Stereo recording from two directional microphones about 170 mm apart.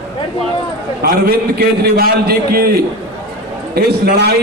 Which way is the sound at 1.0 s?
60° right (ahead or behind).